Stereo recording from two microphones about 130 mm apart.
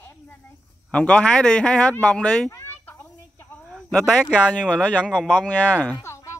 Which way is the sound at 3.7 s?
Centre (ahead or behind).